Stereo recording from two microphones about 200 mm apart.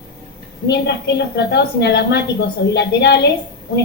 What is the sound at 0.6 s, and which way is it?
Speech, 55° left (ahead or behind).